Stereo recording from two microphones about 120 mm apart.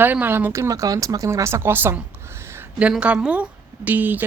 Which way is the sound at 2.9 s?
5° right (ahead or behind).